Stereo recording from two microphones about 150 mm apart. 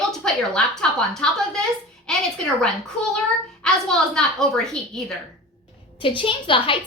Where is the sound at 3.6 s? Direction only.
5° left (ahead or behind).